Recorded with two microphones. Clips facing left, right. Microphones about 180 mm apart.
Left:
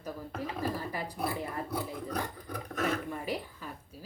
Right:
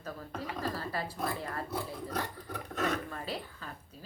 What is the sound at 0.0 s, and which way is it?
A woman's voice, 15° left (ahead or behind).